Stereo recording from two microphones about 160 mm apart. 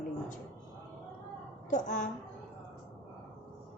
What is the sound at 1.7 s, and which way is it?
Speech, 50° left (ahead or behind).